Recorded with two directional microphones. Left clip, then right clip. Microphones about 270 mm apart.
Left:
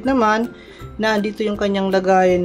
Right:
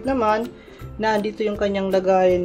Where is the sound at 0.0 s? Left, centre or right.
Centre.